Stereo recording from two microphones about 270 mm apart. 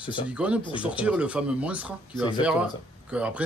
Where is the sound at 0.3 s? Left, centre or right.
Centre.